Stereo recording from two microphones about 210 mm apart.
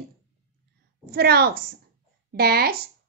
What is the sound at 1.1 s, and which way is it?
A woman's voice, 50° right (ahead or behind).